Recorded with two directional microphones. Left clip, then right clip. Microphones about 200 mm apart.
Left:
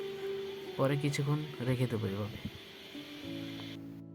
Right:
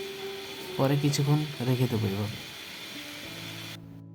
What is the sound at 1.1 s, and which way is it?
Speech, 35° left (ahead or behind).